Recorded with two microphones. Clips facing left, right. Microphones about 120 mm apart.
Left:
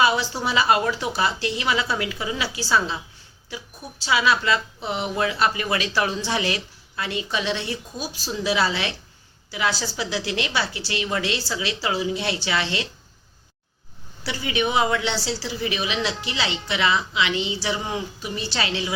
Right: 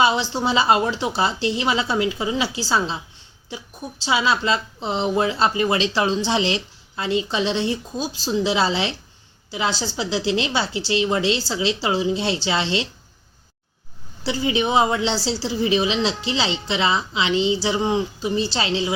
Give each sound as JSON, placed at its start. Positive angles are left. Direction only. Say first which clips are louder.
{"t": 0.0, "sound": "a woman's voice", "louder": "right 2 dB", "side_deg": -25}
{"t": 14.3, "sound": "a woman's voice", "louder": "right 4 dB", "side_deg": -25}